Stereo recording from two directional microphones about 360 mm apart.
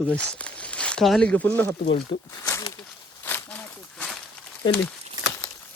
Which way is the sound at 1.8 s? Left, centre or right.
Centre.